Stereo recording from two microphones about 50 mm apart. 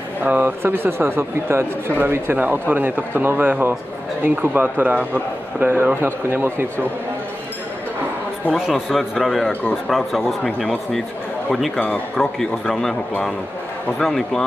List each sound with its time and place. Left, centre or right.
0.2 s speech: right
8.5 s a man's voice: centre
10.6 s a man's voice: centre
11.7 s speech: left
12.2 s a man's voice: centre
13.9 s a man's voice: centre